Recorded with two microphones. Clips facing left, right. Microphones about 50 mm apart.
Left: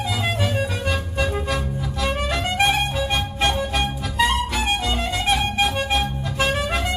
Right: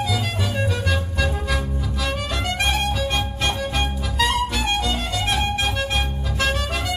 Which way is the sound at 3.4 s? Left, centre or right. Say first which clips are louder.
Left 4 dB; centre.